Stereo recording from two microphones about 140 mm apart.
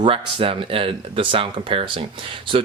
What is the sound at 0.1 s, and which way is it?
Speech, 40° right (ahead or behind).